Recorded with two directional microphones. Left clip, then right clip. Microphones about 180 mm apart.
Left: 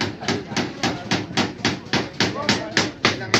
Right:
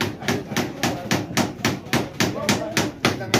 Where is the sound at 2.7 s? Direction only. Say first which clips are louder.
Left 2 dB; 50° right (ahead or behind).